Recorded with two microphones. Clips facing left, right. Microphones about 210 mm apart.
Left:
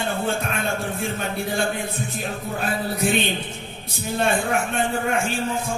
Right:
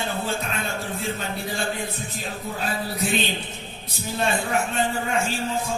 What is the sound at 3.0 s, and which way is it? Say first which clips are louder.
Speech: left 3 dB; 55° left (ahead or behind).